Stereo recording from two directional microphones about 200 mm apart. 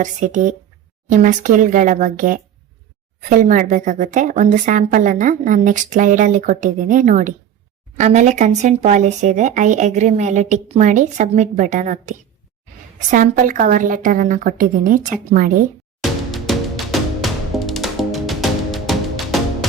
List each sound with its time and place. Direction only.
0.0 s speech: 40° right (ahead or behind)
16.3 s music: centre (ahead or behind)